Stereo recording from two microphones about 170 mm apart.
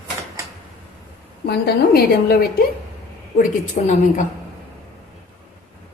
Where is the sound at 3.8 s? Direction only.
50° left (ahead or behind).